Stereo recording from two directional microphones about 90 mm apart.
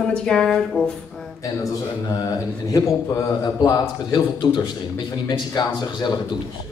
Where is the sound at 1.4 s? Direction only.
40° left (ahead or behind).